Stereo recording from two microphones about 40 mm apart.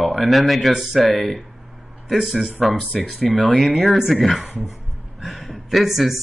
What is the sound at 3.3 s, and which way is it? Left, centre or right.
Speech, left.